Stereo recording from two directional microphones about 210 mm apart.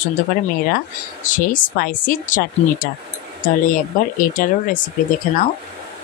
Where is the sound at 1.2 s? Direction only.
40° left (ahead or behind).